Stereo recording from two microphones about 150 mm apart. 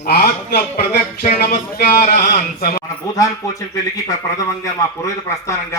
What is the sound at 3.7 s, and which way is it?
A man's voice, 20° left (ahead or behind).